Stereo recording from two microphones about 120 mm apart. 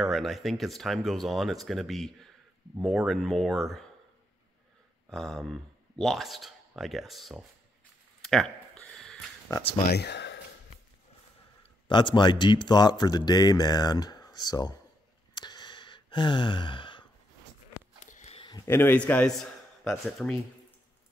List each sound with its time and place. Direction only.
0.0 s speech: centre (ahead or behind)
5.1 s speech: centre (ahead or behind)
8.2 s a sound: 5° left (ahead or behind)
11.9 s speech: 40° left (ahead or behind)
15.3 s sigh: 40° left (ahead or behind)
18.0 s a sound: 90° left
18.7 s a man's voice: 15° left (ahead or behind); by 20.3 s centre (ahead or behind)